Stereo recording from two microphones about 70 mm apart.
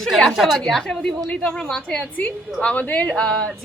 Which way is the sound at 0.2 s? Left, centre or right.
Centre.